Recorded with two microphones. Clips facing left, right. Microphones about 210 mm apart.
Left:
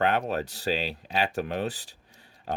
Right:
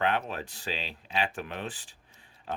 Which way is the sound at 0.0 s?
40° left (ahead or behind).